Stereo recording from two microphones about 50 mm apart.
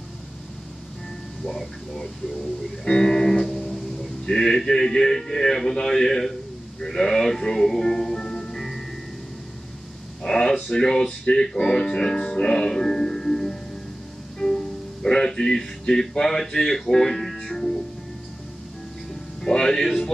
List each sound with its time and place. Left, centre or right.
1.4 s a man's voice: centre
3.5 s music: centre
4.3 s a man's voice: centre
10.2 s a man's voice: centre
11.7 s music: centre
15.0 s speech: centre
19.4 s speech: centre